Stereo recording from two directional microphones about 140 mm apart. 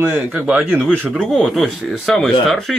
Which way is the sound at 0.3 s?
10° right (ahead or behind).